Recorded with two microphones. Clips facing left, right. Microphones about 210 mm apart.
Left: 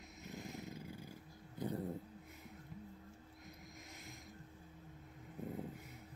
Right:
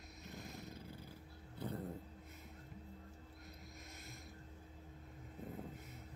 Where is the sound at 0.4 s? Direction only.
20° left (ahead or behind).